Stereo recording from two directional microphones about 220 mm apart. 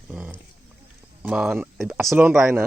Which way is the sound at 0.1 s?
10° right (ahead or behind).